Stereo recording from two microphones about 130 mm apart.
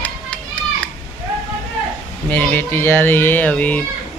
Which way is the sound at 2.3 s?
15° left (ahead or behind).